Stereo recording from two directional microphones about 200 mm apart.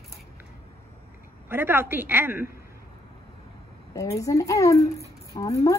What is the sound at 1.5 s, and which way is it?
Speech, 10° right (ahead or behind).